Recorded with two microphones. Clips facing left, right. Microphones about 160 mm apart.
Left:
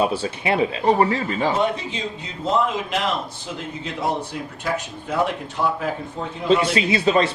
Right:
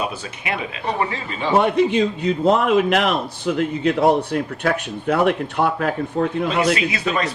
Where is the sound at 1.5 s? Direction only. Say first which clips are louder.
Right 7 dB; 60° right (ahead or behind).